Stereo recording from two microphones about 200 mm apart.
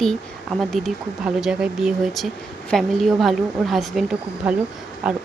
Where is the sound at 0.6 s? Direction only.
Centre (ahead or behind).